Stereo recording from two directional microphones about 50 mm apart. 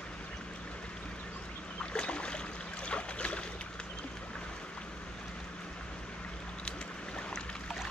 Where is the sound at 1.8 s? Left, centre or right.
Left.